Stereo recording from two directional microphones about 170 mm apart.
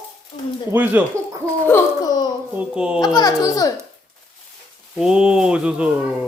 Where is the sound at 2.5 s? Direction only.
5° right (ahead or behind).